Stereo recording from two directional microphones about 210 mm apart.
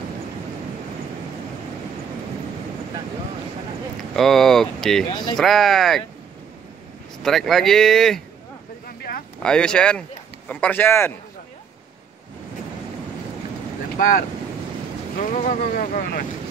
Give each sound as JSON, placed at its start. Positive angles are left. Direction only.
{"t": 4.1, "sound": "speech", "side_deg": 0}
{"t": 5.1, "sound": "speech", "side_deg": 20}
{"t": 5.4, "sound": "speech", "side_deg": 0}
{"t": 7.2, "sound": "speech", "side_deg": 0}
{"t": 9.4, "sound": "speech", "side_deg": 5}
{"t": 15.1, "sound": "speech", "side_deg": 40}